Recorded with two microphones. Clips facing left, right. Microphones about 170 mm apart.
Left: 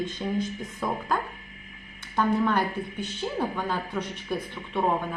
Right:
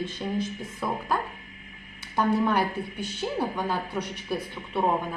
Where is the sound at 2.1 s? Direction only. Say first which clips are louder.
Even; 10° right (ahead or behind).